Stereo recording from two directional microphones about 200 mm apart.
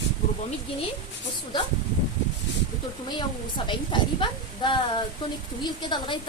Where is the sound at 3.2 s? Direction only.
25° left (ahead or behind).